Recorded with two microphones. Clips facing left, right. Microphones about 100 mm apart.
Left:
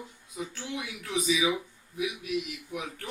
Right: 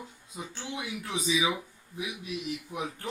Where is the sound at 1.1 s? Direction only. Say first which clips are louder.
Left 2 dB; 30° right (ahead or behind).